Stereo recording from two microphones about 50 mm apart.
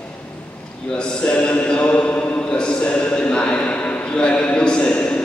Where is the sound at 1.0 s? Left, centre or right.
Left.